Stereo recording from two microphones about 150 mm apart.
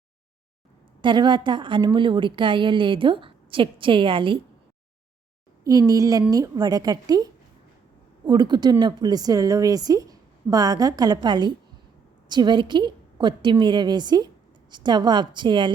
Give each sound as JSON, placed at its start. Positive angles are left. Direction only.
{"t": 1.0, "sound": "a woman's voice", "side_deg": -30}
{"t": 5.6, "sound": "a woman's voice", "side_deg": -20}
{"t": 8.3, "sound": "a woman's voice", "side_deg": -30}